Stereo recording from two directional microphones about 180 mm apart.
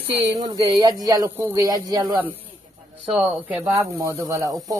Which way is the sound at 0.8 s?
20° right (ahead or behind).